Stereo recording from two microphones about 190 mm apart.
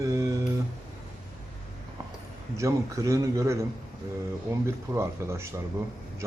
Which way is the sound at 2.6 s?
15° right (ahead or behind).